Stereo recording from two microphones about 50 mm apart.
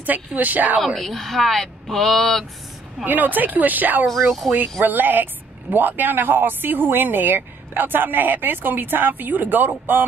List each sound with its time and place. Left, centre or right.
0.0 s speech: right
0.7 s speech: centre
3.1 s speech: right
4.2 s speech: centre
4.5 s speech: right